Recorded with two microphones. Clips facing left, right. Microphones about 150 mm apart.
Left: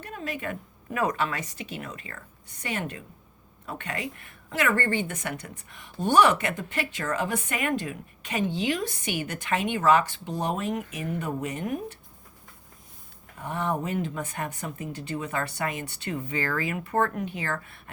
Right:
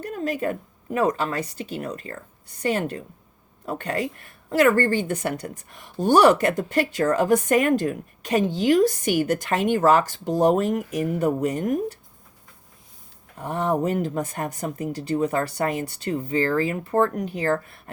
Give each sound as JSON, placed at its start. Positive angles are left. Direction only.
{"t": 0.0, "sound": "a sound", "side_deg": -40}
{"t": 0.9, "sound": "a woman's voice", "side_deg": -30}
{"t": 13.4, "sound": "a woman's voice", "side_deg": -40}